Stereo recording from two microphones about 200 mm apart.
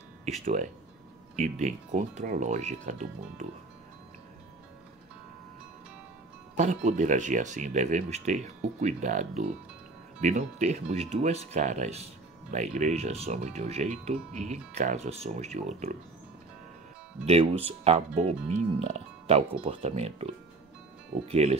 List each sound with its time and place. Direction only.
0.2 s speech: 35° right (ahead or behind)
6.5 s speech: 35° right (ahead or behind)
17.6 s speech: 30° right (ahead or behind)
21.3 s speech: 35° right (ahead or behind)